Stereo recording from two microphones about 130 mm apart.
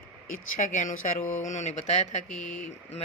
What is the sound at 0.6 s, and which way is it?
Speech, 70° left (ahead or behind).